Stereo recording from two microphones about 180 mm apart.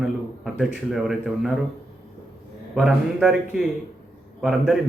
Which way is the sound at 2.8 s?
5° right (ahead or behind).